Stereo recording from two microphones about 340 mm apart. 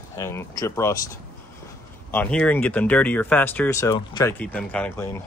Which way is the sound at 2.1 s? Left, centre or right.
Centre.